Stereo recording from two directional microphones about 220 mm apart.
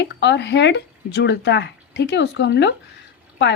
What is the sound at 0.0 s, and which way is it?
A woman's voice, 50° left (ahead or behind).